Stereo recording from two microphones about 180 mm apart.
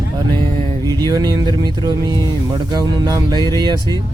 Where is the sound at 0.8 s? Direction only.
20° right (ahead or behind).